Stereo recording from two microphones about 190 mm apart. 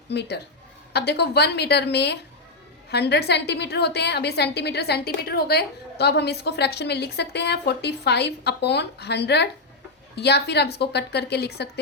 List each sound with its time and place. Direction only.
0.1 s a woman's voice: 65° left (ahead or behind)